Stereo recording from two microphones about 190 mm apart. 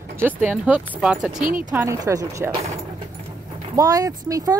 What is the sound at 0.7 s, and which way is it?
Speech, 5° right (ahead or behind).